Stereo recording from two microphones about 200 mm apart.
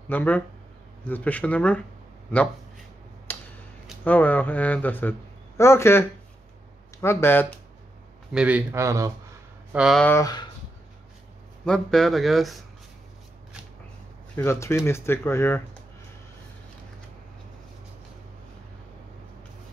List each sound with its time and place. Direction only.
0.1 s speech: 10° left (ahead or behind)
3.3 s tick-tock: 10° left (ahead or behind)
4.0 s speech: 10° left (ahead or behind)
8.3 s speech: 5° right (ahead or behind)
9.7 s speech: 5° right (ahead or behind)
10.0 s speech: 15° left (ahead or behind)
11.6 s speech: 5° left (ahead or behind)
14.3 s speech: 10° left (ahead or behind)